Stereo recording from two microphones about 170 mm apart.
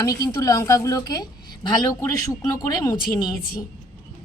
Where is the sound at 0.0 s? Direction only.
20° left (ahead or behind).